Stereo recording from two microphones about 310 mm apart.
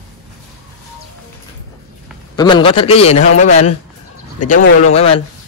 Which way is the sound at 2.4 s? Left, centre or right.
Centre.